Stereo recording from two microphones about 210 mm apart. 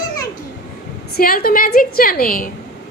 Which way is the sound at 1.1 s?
45° left (ahead or behind).